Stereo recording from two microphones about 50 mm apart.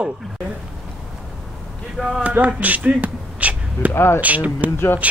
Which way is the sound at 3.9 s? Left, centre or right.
Left.